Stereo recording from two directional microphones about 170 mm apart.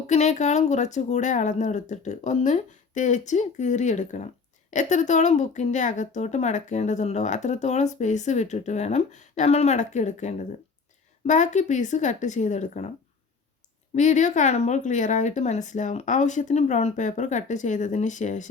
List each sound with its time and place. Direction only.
0.1 s a woman's voice: 45° left (ahead or behind)
13.9 s a woman's voice: 45° left (ahead or behind)